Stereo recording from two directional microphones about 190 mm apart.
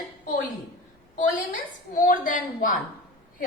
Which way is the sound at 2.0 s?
45° left (ahead or behind).